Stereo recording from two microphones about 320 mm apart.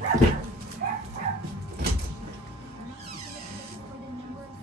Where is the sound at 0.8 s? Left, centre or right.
Right.